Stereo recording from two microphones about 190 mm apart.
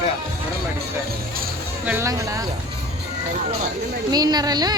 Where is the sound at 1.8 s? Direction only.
15° right (ahead or behind).